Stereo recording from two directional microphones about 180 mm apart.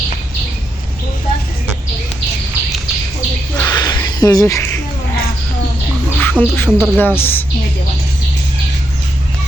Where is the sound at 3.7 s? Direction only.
20° left (ahead or behind).